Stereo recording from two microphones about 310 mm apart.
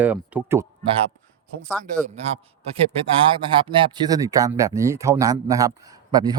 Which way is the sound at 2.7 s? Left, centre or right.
Centre.